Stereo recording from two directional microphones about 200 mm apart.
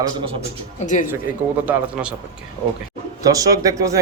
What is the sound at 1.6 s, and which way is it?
Speech, 5° right (ahead or behind).